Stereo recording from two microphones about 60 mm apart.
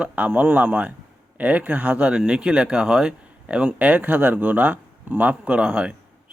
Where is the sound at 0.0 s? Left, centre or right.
Right.